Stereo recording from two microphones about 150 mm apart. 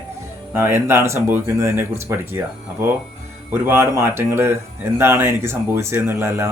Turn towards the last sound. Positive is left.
turn(degrees=-15)  # may be behind; listen again after turning